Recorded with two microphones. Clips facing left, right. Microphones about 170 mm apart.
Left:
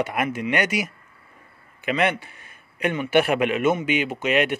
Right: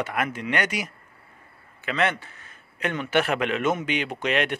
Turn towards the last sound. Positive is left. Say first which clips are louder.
# left 3 dB
turn(degrees=5)  # may be behind; listen again after turning